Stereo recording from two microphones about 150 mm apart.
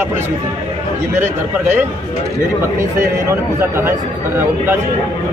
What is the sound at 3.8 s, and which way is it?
Speech, 15° right (ahead or behind).